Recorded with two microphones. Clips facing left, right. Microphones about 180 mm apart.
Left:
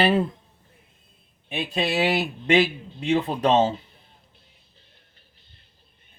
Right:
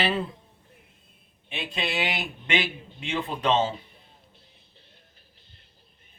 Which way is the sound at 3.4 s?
40° left (ahead or behind).